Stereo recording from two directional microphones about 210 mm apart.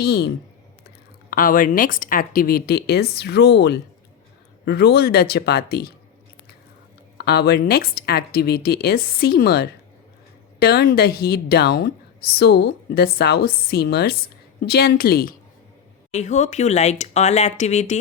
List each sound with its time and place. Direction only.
0.0 s a woman's voice: 50° left (ahead or behind)
7.2 s a woman's voice: 50° left (ahead or behind)
16.1 s speech: 35° left (ahead or behind)